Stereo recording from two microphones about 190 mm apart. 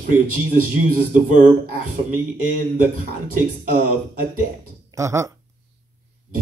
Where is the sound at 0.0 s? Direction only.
50° right (ahead or behind).